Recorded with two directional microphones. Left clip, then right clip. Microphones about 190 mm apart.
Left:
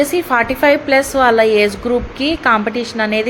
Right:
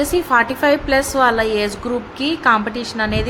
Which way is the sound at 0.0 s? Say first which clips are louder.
Left 1 dB; 10° left (ahead or behind).